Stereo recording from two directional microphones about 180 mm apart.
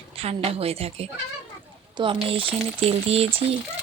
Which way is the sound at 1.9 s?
30° right (ahead or behind).